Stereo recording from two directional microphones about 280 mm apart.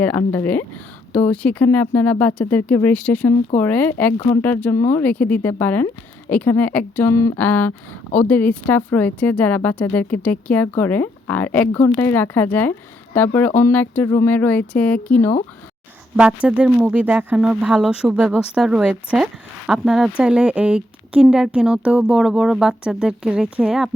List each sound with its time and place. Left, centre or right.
0.0 s speech: centre